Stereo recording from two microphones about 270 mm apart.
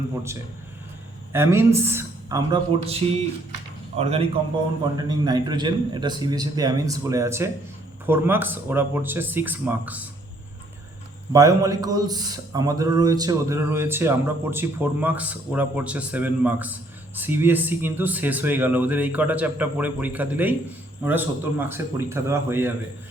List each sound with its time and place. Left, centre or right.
1.3 s a man's voice: centre
11.3 s a man's voice: centre